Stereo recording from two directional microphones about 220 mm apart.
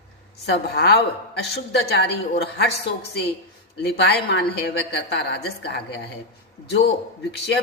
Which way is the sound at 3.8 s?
50° left (ahead or behind).